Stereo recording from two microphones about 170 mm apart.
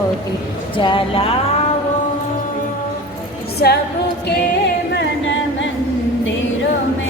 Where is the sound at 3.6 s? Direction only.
65° left (ahead or behind).